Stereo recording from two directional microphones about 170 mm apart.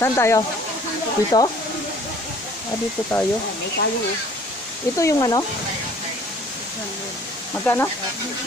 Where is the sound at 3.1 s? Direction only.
20° left (ahead or behind).